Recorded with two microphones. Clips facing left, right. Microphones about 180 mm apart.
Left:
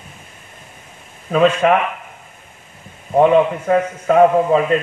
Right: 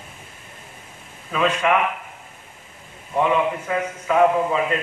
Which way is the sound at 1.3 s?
45° left (ahead or behind).